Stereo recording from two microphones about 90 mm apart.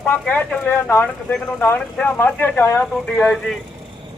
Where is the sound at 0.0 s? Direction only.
20° left (ahead or behind).